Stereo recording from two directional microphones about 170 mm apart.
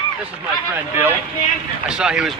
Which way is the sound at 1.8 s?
5° right (ahead or behind).